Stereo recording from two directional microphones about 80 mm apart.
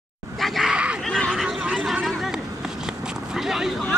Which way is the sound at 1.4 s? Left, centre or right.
Centre.